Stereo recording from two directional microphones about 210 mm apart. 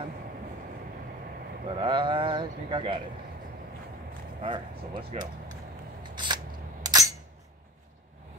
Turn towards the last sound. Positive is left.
turn(degrees=-20)  # may be behind; listen again after turning